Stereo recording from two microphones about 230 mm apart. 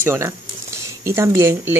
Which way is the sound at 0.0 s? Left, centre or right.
Centre.